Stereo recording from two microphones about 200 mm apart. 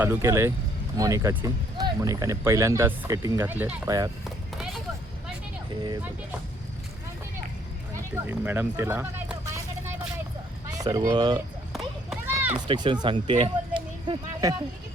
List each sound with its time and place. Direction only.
0.0 s speech: 10° right (ahead or behind)
8.1 s speech: 10° right (ahead or behind)
10.7 s speech: 20° right (ahead or behind)
11.7 s run: 5° right (ahead or behind)
12.6 s speech: 25° right (ahead or behind)